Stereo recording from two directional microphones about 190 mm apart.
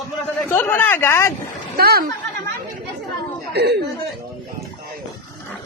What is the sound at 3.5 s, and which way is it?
Speech, 60° right (ahead or behind).